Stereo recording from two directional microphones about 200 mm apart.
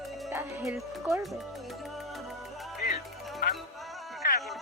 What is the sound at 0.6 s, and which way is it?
Speech, centre (ahead or behind).